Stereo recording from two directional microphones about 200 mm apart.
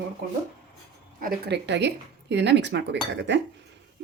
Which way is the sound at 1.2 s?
50° right (ahead or behind).